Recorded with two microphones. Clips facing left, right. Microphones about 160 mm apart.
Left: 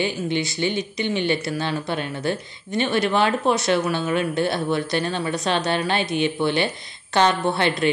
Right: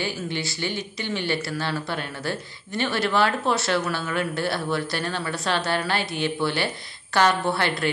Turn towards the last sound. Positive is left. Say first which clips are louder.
# left 3 dB
turn(degrees=20)  # may be behind; listen again after turning